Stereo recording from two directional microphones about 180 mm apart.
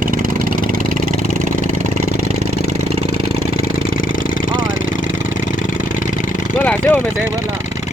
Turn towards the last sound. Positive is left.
turn(degrees=10)  # may be behind; listen again after turning